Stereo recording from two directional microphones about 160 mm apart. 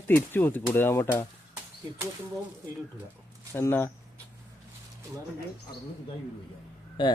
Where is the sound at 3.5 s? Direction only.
15° left (ahead or behind).